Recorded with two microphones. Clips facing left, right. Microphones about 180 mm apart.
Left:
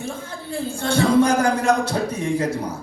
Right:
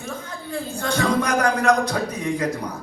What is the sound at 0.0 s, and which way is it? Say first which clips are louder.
A man's voice: left 2 dB; 30° left (ahead or behind).